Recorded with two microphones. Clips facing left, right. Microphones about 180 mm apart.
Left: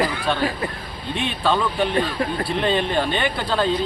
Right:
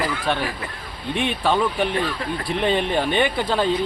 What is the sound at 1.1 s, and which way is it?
Speech, 60° right (ahead or behind).